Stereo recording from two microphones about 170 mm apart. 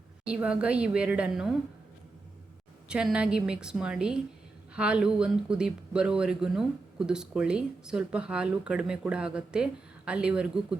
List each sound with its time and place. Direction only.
0.3 s a woman's voice: 5° right (ahead or behind)
2.9 s speech: 5° right (ahead or behind)